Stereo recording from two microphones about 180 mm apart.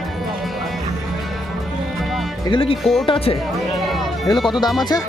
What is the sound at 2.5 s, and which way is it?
Speech, 30° left (ahead or behind).